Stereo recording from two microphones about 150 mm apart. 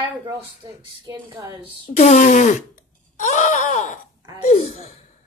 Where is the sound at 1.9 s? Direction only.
45° left (ahead or behind).